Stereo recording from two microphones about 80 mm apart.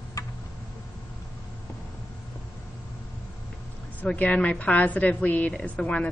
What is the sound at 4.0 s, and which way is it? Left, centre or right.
Speech, centre.